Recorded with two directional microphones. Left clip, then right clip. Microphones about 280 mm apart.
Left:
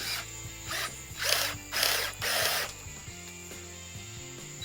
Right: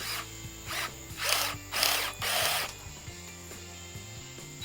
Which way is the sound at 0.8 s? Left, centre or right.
Right.